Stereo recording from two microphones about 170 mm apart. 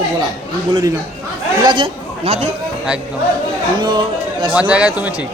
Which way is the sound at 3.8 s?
25° right (ahead or behind).